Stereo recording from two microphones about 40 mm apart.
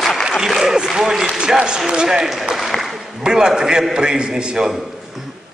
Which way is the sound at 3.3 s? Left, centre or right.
Centre.